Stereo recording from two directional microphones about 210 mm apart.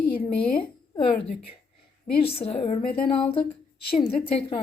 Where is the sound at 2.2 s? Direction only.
30° left (ahead or behind).